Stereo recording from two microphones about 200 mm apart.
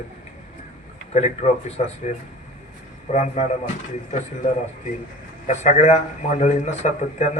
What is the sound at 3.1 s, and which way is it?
Speech, 35° left (ahead or behind).